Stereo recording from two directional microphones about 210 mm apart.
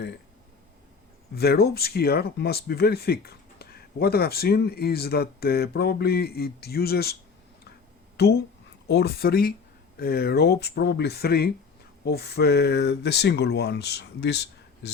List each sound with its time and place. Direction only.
1.4 s speech: 50° left (ahead or behind)